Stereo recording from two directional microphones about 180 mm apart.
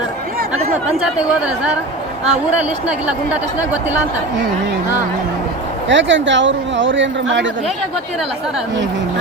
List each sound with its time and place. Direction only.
0.9 s speech: 5° right (ahead or behind)
2.8 s speech: 5° right (ahead or behind)
5.9 s speech: 90° right